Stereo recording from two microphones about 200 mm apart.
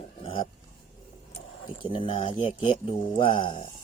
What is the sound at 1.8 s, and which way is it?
Speech, 25° left (ahead or behind).